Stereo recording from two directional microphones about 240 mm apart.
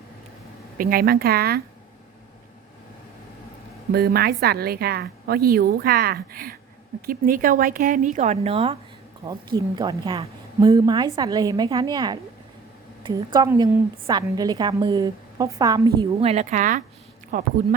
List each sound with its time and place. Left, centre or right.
0.8 s a woman's voice: right
3.9 s a woman's voice: right; by 16.3 s centre
16.3 s a woman's voice: right